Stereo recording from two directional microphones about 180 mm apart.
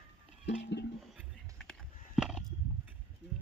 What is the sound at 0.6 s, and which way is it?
Music, 70° left (ahead or behind).